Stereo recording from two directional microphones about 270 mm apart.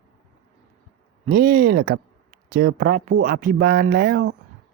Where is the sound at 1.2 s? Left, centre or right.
Right.